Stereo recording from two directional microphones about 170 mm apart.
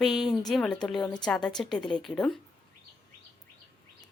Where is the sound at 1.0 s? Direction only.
25° left (ahead or behind).